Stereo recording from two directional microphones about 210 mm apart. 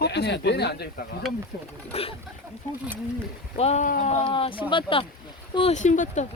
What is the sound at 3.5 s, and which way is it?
Speech, 30° left (ahead or behind).